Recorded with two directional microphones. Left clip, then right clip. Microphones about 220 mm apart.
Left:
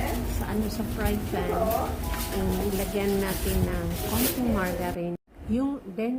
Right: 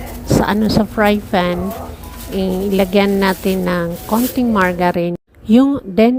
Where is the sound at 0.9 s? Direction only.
50° right (ahead or behind).